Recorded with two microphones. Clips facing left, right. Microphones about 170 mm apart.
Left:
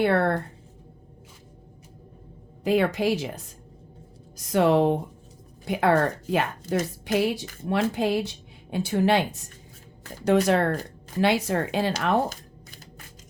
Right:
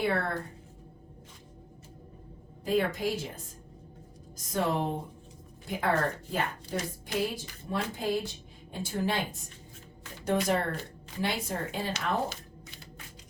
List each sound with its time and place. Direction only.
0.0 s speech: 70° left (ahead or behind)
2.6 s a woman's voice: 80° left
12.3 s a sound: 45° left (ahead or behind)